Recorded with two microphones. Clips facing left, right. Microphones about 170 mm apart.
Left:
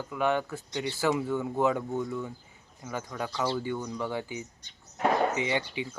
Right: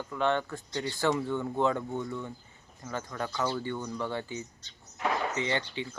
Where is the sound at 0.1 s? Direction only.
10° left (ahead or behind).